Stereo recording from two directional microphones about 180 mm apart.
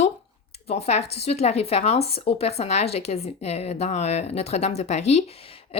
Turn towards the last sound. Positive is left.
turn(degrees=35)  # may be behind; listen again after turning